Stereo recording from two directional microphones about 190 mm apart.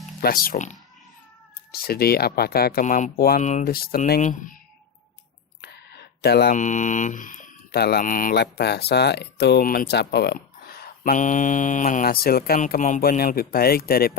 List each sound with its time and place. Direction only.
0.2 s speech: 50° left (ahead or behind)
1.7 s speech: 55° left (ahead or behind)
5.6 s a sound: 60° left (ahead or behind)
6.6 s speech: 40° left (ahead or behind)